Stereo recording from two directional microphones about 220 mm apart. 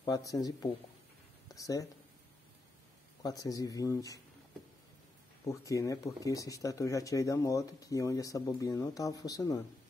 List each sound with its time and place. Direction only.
0.0 s speech: 15° left (ahead or behind)
3.2 s speech: 15° left (ahead or behind)
5.4 s speech: 15° left (ahead or behind)